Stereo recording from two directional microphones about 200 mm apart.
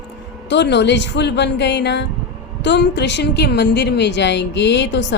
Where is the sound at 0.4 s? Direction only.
60° left (ahead or behind).